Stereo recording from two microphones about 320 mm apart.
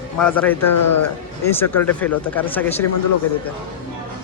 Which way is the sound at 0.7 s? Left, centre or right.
Left.